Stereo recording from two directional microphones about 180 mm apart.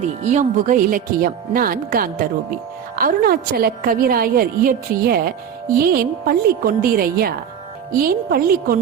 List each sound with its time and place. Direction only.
0.0 s a woman's voice: 40° right (ahead or behind)